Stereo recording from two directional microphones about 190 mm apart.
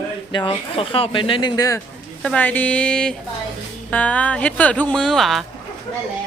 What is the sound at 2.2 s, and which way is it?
Speech, 5° left (ahead or behind).